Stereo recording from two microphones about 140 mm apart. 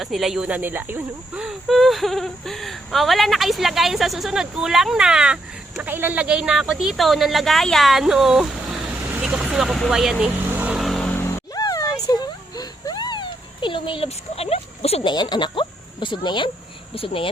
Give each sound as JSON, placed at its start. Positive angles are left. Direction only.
{"t": 0.0, "sound": "speech", "side_deg": 0}
{"t": 1.5, "sound": "speech", "side_deg": 0}
{"t": 10.8, "sound": "vehicle", "side_deg": 0}
{"t": 15.1, "sound": "speech", "side_deg": 30}